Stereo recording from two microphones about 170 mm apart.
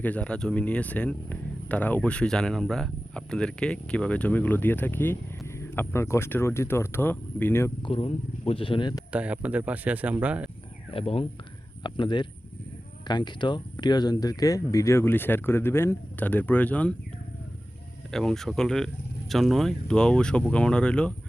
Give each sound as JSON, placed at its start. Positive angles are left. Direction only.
{"t": 0.0, "sound": "speech", "side_deg": 10}
{"t": 7.8, "sound": "speech", "side_deg": 35}
{"t": 9.1, "sound": "speech", "side_deg": -10}
{"t": 10.9, "sound": "speech", "side_deg": 35}
{"t": 18.1, "sound": "speech", "side_deg": 0}